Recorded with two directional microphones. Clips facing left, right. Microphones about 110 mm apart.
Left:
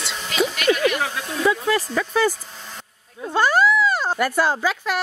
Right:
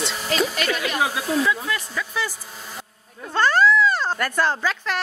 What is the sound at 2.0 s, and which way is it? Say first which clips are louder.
Speech: left 8 dB; 50° left (ahead or behind).